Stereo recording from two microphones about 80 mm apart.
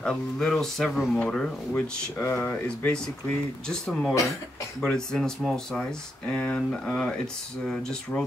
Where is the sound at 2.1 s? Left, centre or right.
Left.